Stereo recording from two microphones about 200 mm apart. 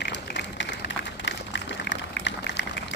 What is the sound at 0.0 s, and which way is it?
Run, 60° left (ahead or behind).